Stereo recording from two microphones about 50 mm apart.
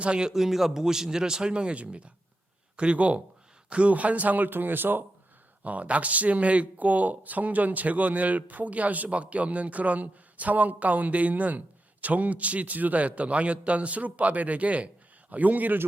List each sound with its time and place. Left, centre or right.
0.0 s a man's voice: centre; by 5.0 s right
5.6 s a man's voice: right